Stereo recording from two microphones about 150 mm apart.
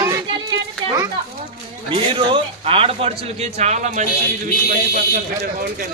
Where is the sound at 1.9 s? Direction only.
35° right (ahead or behind); by 4.1 s 50° right (ahead or behind).